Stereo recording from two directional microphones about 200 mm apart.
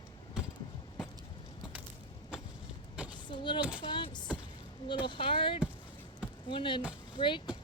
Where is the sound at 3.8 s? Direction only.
25° left (ahead or behind).